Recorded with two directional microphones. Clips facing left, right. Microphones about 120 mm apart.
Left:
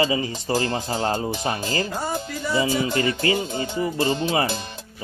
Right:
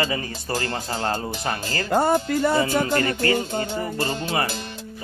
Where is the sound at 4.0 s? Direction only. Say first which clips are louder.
Left 4 dB; 20° left (ahead or behind).